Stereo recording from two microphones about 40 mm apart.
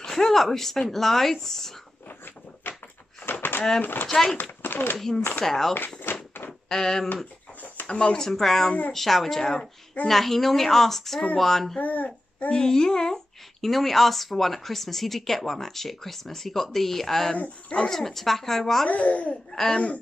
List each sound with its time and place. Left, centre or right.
0.0 s speech: centre
2.0 s a sound: left
3.8 s speech: left
4.9 s speech: centre
6.1 s a sound: left
6.7 s speech: centre
8.3 s speech: centre
11.8 s speech: left
12.5 s speech: centre
18.9 s speech: left